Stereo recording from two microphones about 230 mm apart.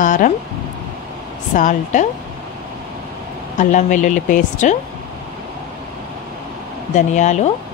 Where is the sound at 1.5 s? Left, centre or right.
Left.